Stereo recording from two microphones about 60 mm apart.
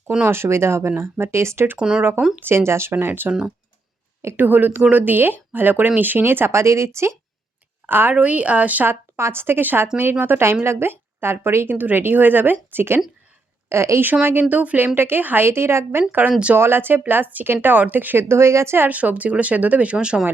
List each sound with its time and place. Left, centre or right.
0.3 s speech: right
1.8 s speech: centre
2.4 s speech: right
2.9 s a woman's voice: right
4.4 s a woman's voice: right
7.9 s a woman's voice: right
8.1 s speech: right
9.1 s a woman's voice: right
13.7 s speech: right
14.0 s a woman's voice: right
15.4 s a woman's voice: right
18.9 s speech: right